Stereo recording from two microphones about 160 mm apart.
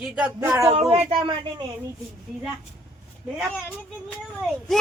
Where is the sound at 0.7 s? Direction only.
40° right (ahead or behind).